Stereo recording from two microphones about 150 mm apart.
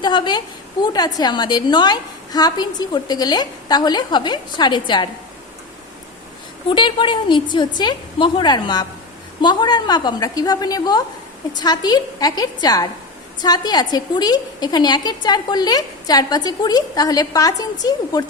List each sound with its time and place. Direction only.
0.0 s a woman's voice: 30° left (ahead or behind)
6.7 s a woman's voice: 35° left (ahead or behind)